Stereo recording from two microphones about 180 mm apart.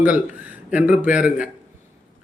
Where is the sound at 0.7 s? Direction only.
10° right (ahead or behind).